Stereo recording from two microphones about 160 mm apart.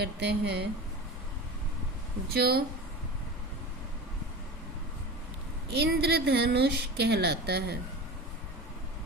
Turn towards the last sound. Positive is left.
turn(degrees=-90)